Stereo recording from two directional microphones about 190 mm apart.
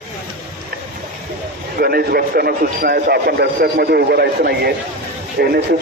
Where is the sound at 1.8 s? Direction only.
55° right (ahead or behind).